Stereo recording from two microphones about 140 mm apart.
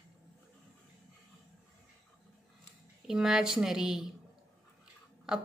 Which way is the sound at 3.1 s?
5° right (ahead or behind).